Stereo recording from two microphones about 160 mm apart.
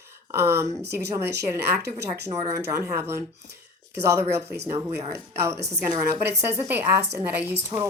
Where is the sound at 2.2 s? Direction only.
20° right (ahead or behind).